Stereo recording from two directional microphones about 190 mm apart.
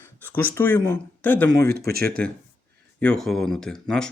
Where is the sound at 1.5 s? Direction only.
55° right (ahead or behind).